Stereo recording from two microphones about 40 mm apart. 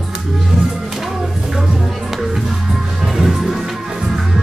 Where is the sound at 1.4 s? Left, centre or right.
Centre.